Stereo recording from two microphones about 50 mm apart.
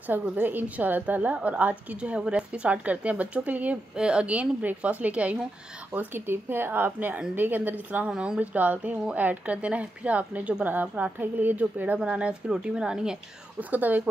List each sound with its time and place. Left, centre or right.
0.0 s a woman's voice: right
2.0 s speech: centre
3.9 s speech: centre
6.1 s a woman's voice: right
12.0 s a woman's voice: right
13.6 s a woman's voice: right